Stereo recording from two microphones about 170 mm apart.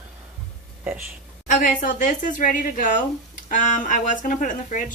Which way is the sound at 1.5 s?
50° left (ahead or behind).